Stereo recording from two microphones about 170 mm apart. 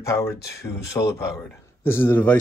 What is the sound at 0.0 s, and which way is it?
Speech, 15° left (ahead or behind).